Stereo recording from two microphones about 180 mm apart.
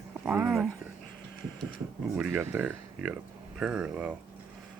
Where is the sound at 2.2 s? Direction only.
10° right (ahead or behind).